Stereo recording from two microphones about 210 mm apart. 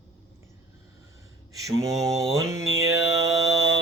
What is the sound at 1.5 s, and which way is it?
Mantra, 15° right (ahead or behind).